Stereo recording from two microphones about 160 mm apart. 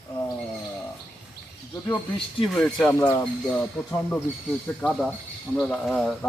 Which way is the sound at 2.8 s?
15° left (ahead or behind).